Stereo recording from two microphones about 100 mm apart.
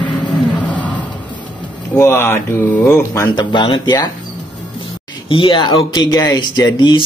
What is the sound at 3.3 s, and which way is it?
Speech, 50° left (ahead or behind).